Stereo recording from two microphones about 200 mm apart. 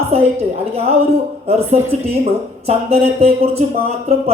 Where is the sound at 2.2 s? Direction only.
30° right (ahead or behind).